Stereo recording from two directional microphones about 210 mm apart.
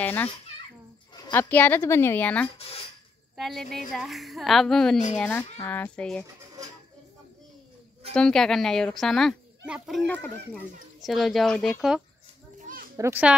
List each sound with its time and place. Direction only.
0.0 s a child's voice: 10° left (ahead or behind)
6.2 s bird: 15° right (ahead or behind)
8.1 s speech: 5° left (ahead or behind)
12.5 s children playing: 40° right (ahead or behind)
12.9 s a child's voice: 10° right (ahead or behind)